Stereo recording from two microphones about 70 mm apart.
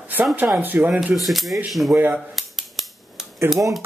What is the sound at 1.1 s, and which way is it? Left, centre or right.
Speech, centre.